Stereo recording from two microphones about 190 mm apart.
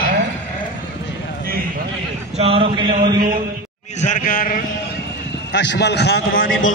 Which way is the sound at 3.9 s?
40° left (ahead or behind).